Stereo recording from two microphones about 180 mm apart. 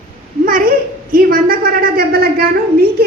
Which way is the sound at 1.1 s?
55° right (ahead or behind).